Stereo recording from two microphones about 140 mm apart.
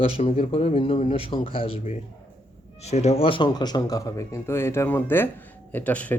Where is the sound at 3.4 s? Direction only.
30° left (ahead or behind).